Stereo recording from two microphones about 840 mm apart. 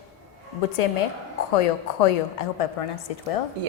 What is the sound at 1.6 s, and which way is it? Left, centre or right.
A woman's voice, left.